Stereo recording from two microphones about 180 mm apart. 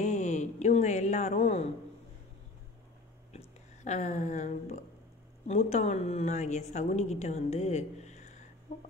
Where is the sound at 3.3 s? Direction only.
40° left (ahead or behind).